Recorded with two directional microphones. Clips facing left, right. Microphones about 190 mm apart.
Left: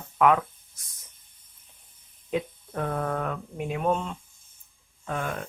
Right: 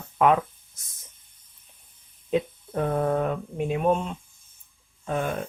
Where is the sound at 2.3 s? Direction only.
25° right (ahead or behind).